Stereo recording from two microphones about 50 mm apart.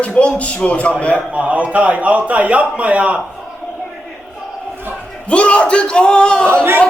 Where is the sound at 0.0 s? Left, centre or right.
Left.